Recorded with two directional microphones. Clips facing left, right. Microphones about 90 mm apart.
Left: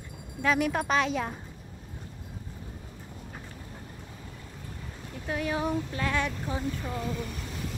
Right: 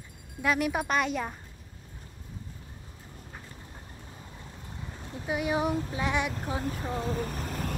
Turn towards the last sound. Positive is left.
turn(degrees=-45)  # may be behind; listen again after turning